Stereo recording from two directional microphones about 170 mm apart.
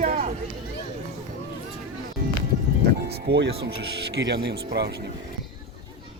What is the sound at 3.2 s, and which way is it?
Speech, 70° right (ahead or behind).